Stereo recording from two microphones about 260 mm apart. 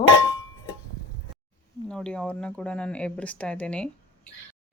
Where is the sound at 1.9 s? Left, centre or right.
Centre.